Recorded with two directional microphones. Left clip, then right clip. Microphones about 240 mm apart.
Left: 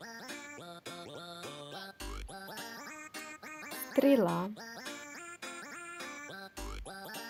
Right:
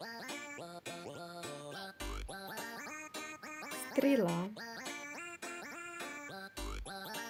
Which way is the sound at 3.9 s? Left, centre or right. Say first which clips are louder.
Left 4 dB; centre.